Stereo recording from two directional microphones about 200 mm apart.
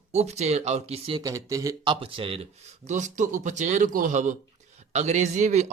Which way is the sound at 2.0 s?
25° right (ahead or behind).